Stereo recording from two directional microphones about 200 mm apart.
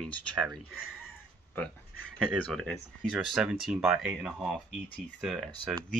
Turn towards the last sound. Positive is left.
turn(degrees=0)  # may be behind; listen again after turning